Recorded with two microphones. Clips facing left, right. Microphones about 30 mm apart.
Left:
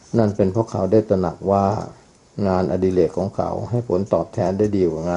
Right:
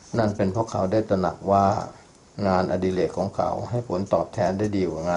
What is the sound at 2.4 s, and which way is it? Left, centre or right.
Speech, right.